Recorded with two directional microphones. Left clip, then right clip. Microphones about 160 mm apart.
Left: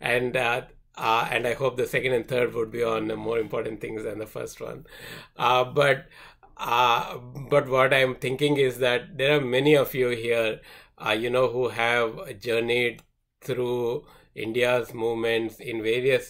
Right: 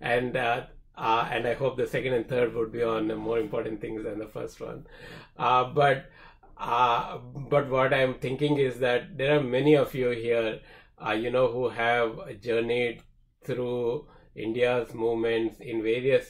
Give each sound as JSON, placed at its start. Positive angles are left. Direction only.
{"t": 0.0, "sound": "speech", "side_deg": 15}